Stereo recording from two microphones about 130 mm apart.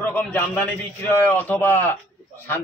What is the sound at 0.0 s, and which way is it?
A man's voice, 10° left (ahead or behind).